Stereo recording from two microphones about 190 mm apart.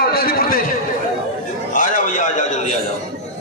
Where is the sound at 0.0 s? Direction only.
50° left (ahead or behind).